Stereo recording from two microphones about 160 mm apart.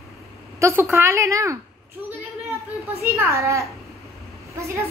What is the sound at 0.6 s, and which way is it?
A woman's voice, 15° right (ahead or behind).